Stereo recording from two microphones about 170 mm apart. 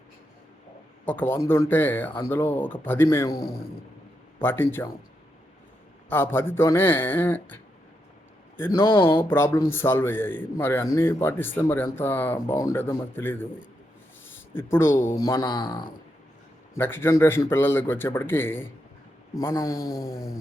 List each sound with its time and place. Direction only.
1.0 s a man's voice: 10° left (ahead or behind)
6.1 s a man's voice: 10° left (ahead or behind)
8.9 s speech: 30° left (ahead or behind)
9.3 s a man's voice: 15° left (ahead or behind)
14.5 s a man's voice: 15° left (ahead or behind)
16.7 s a man's voice: 15° left (ahead or behind)